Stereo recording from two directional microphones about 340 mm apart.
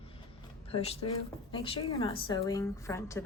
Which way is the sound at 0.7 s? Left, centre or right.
Centre.